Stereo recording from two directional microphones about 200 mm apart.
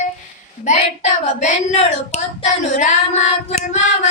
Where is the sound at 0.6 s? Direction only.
35° left (ahead or behind).